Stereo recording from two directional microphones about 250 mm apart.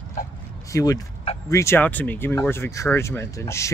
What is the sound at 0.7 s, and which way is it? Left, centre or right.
Speech, centre.